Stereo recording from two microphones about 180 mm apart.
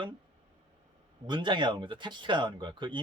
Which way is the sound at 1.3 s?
25° right (ahead or behind).